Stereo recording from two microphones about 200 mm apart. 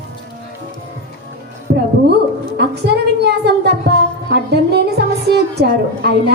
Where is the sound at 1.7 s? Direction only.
55° right (ahead or behind).